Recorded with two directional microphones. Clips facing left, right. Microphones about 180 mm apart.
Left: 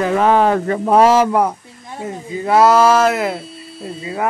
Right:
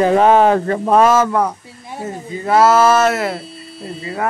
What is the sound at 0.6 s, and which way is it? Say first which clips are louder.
Speech: left 1 dB; 15° left (ahead or behind).